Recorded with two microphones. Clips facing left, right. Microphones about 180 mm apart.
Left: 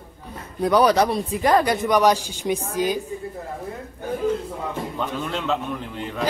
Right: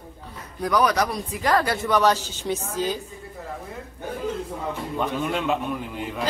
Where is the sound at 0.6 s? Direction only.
30° left (ahead or behind); by 3.0 s 15° left (ahead or behind).